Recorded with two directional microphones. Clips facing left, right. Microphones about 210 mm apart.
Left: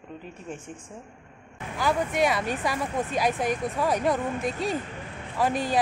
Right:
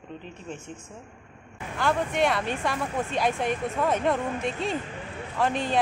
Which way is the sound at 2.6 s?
5° left (ahead or behind).